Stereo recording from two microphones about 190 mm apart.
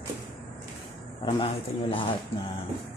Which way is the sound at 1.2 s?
30° left (ahead or behind).